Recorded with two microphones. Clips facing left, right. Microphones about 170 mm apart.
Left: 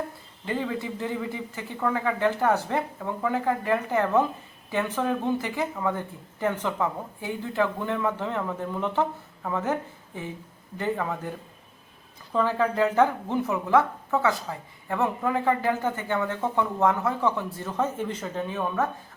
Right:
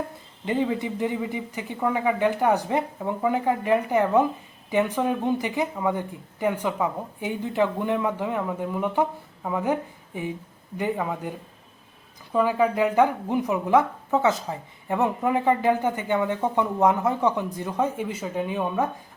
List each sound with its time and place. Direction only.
0.4 s speech: 20° right (ahead or behind)